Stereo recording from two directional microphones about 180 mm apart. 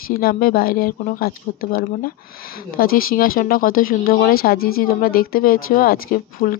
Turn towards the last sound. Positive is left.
turn(degrees=55)  # may be behind; listen again after turning